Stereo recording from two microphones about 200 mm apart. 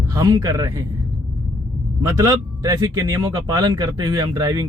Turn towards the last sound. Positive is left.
turn(degrees=-20)  # may be behind; listen again after turning